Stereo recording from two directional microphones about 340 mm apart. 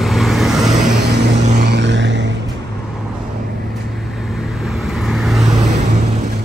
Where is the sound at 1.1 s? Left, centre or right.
Right.